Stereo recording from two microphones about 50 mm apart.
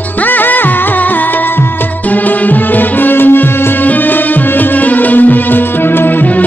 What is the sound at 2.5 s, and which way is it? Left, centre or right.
Music, left.